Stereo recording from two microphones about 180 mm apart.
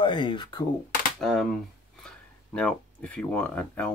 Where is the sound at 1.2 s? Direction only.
Centre (ahead or behind).